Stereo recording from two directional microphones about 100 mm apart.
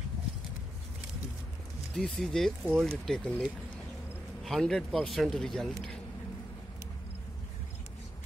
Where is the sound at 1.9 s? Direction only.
5° left (ahead or behind).